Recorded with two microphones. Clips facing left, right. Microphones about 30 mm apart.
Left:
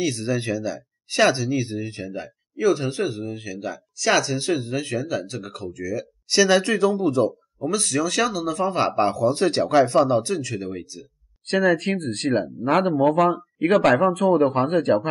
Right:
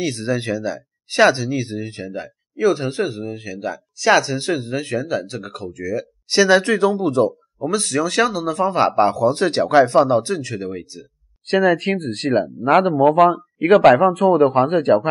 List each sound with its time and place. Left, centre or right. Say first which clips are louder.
0.0 s speech: right 2 dB; centre